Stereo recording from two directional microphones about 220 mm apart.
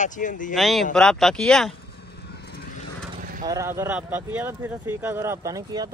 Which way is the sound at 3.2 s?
40° right (ahead or behind).